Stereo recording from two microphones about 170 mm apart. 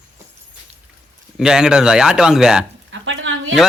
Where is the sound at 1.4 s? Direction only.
5° right (ahead or behind).